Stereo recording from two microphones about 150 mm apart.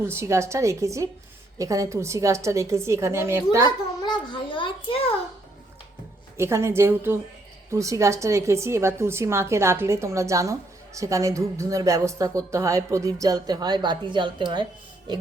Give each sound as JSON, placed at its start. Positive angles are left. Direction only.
{"t": 0.0, "sound": "a woman's voice", "side_deg": -15}
{"t": 4.0, "sound": "a child's voice", "side_deg": 30}
{"t": 6.3, "sound": "a woman's voice", "side_deg": -15}